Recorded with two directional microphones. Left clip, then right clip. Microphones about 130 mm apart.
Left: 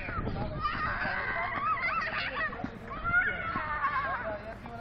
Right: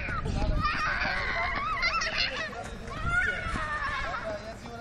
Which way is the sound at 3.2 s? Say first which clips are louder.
Right 1 dB; 55° right (ahead or behind).